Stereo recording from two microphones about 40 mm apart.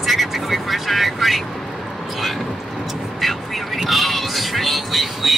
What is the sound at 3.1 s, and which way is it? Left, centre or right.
Speech, centre.